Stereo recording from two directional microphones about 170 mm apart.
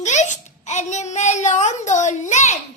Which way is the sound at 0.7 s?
45° left (ahead or behind).